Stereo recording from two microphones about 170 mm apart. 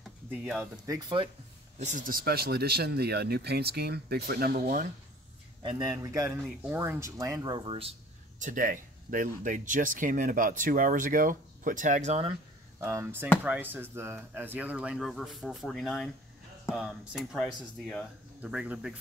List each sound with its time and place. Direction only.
0.3 s speech: 5° right (ahead or behind)
0.8 s speech: 20° right (ahead or behind)
1.8 s speech: 45° right (ahead or behind)
5.6 s a man's voice: 25° right (ahead or behind)
6.4 s speech: 10° right (ahead or behind); by 7.9 s 30° right (ahead or behind)
8.4 s speech: 50° right (ahead or behind)
12.8 s speech: 15° right (ahead or behind)